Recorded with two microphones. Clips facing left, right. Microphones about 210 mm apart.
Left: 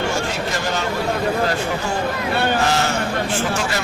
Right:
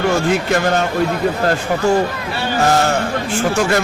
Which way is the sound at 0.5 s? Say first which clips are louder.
Right 8 dB; 55° right (ahead or behind).